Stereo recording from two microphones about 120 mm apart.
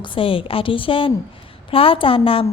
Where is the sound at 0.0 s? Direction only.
45° left (ahead or behind).